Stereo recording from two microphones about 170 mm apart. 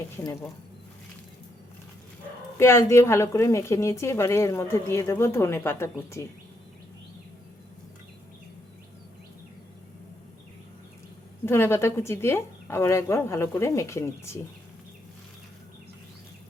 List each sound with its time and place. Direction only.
2.6 s a woman's voice: 15° left (ahead or behind)
11.4 s a woman's voice: 15° left (ahead or behind)